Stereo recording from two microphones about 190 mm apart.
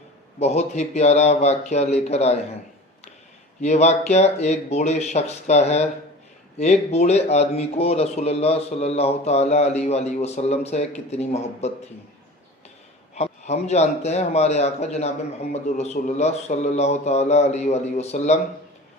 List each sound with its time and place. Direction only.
0.3 s speech: 35° left (ahead or behind)
3.6 s speech: 35° left (ahead or behind)
13.1 s speech: 35° left (ahead or behind)